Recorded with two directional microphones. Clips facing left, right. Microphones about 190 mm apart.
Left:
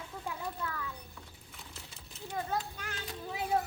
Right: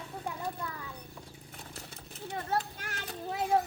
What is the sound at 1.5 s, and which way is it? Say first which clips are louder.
Vehicle: right 4 dB; 45° right (ahead or behind).